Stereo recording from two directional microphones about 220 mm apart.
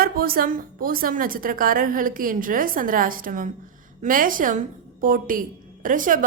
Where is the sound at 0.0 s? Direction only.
40° right (ahead or behind).